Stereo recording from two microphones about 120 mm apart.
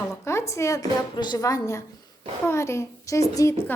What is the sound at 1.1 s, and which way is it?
A woman's voice, 40° left (ahead or behind).